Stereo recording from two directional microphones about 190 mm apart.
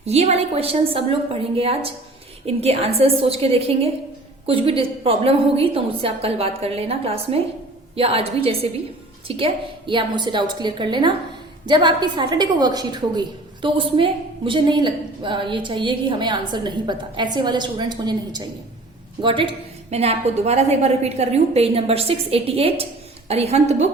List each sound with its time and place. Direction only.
0.0 s a woman's voice: 35° right (ahead or behind)